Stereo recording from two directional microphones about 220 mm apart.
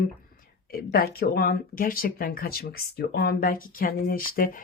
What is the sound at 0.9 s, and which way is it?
Speech, 45° left (ahead or behind).